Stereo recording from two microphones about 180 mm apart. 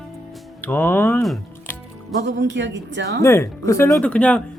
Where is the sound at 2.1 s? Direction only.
75° right (ahead or behind).